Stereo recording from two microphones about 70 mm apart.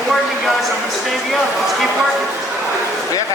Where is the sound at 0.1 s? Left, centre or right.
Centre.